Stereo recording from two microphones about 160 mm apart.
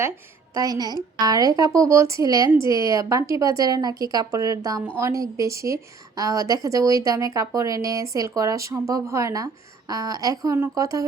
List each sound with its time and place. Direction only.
0.5 s a woman's voice: 20° right (ahead or behind)